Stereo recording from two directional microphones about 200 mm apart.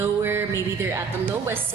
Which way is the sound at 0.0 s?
10° right (ahead or behind).